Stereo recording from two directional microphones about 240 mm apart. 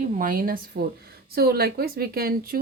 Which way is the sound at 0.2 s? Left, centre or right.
Right.